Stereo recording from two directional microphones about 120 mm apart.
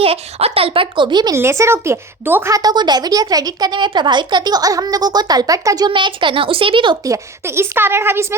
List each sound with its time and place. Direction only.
0.0 s speech: 55° right (ahead or behind); by 1.4 s 35° right (ahead or behind)
1.4 s a woman's voice: 25° right (ahead or behind)
2.5 s a woman's voice: 35° right (ahead or behind)
5.9 s speech: 45° right (ahead or behind)
7.0 s a woman's voice: 25° right (ahead or behind)